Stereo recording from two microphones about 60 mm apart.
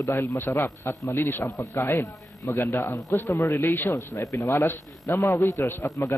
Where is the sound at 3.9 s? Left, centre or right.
Left.